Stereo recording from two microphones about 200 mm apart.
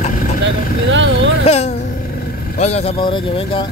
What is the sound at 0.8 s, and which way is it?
Speech, 70° right (ahead or behind).